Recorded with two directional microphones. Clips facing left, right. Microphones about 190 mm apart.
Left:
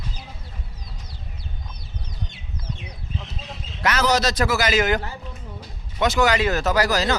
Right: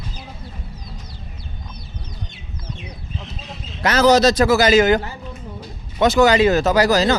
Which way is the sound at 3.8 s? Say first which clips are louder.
Right 7 dB; 25° right (ahead or behind).